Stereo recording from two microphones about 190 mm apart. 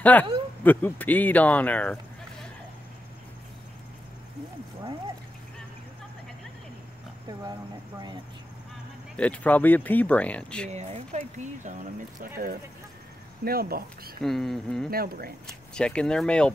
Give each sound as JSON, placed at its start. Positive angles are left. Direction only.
{"t": 0.0, "sound": "speech", "side_deg": 10}
{"t": 9.1, "sound": "speech", "side_deg": 5}
{"t": 10.7, "sound": "speech", "side_deg": -35}
{"t": 14.2, "sound": "speech", "side_deg": 0}
{"t": 14.9, "sound": "speech", "side_deg": -50}
{"t": 15.4, "sound": "speech", "side_deg": 5}